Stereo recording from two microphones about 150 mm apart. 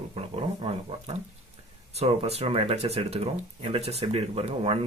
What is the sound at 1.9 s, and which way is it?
Speech, 45° right (ahead or behind).